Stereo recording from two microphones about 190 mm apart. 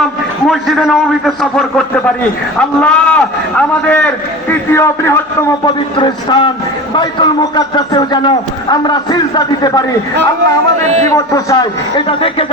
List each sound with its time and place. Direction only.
0.4 s a man's voice: centre (ahead or behind)
6.0 s a man's voice: 25° left (ahead or behind)
10.8 s a man's voice: 35° right (ahead or behind)
11.1 s a man's voice: 15° left (ahead or behind)